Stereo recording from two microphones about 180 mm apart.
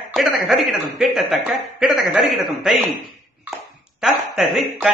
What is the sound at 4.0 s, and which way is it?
Speech, centre (ahead or behind).